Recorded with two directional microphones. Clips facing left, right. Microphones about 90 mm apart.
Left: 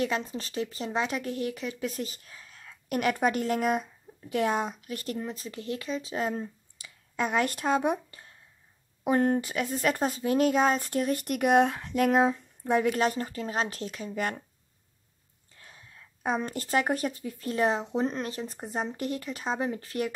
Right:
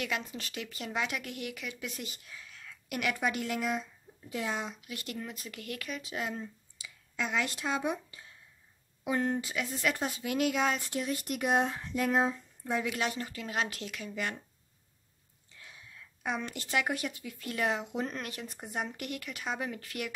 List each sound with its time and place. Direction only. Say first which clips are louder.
0.0 s speech: left 6 dB; 35° left (ahead or behind); by 12.9 s 55° left (ahead or behind)
12.9 s speech: left 7 dB; 40° left (ahead or behind)
15.5 s speech: even; 40° left (ahead or behind)